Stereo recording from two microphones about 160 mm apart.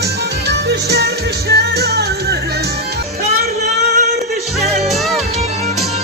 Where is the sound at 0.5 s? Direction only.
90° right.